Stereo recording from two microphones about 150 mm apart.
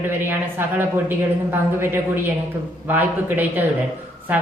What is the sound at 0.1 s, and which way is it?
A woman's voice, 15° right (ahead or behind).